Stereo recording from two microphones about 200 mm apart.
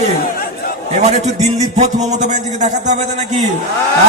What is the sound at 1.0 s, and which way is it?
Speech, 35° right (ahead or behind).